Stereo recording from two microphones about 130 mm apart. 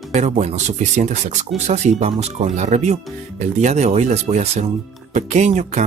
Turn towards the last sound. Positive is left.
turn(degrees=-65)  # may be behind; listen again after turning